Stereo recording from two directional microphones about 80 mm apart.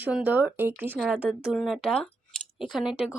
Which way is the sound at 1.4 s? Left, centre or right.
Centre.